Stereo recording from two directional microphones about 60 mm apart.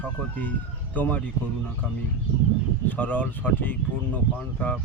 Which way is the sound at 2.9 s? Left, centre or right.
Left.